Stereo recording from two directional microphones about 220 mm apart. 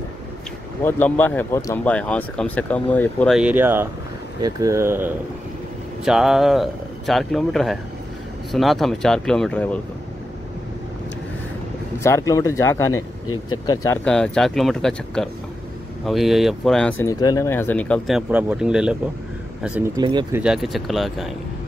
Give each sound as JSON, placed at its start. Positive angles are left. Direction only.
{"t": 0.8, "sound": "speech", "side_deg": 10}
{"t": 12.0, "sound": "speech", "side_deg": 15}
{"t": 12.9, "sound": "speech", "side_deg": 75}
{"t": 14.0, "sound": "speech", "side_deg": 5}
{"t": 17.0, "sound": "speech", "side_deg": 15}
{"t": 20.0, "sound": "speech", "side_deg": -20}
{"t": 20.3, "sound": "speech", "side_deg": -5}